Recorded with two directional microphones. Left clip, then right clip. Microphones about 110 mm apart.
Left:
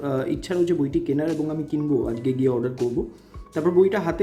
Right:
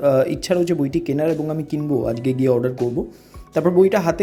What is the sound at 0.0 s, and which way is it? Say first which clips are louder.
Speech: right 9 dB; 45° right (ahead or behind).